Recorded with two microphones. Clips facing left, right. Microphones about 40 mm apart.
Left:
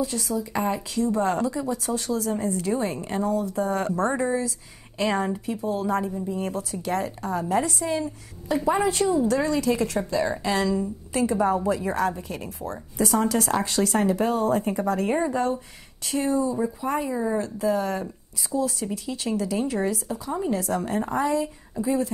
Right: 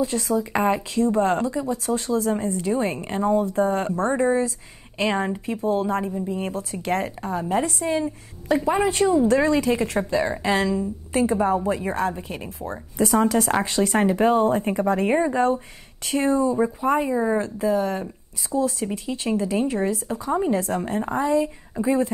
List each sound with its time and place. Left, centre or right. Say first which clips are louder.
0.4 s a woman's voice: right 4 dB; right
7.2 s a woman's voice: even; right
16.1 s a woman's voice: right 3 dB; right
17.6 s speech: right 2 dB; right
18.5 s a woman's voice: right 3 dB; right